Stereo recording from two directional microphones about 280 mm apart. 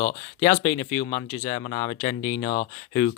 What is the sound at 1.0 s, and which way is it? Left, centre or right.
Speech, left.